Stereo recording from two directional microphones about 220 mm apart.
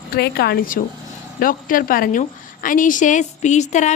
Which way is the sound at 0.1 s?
45° left (ahead or behind).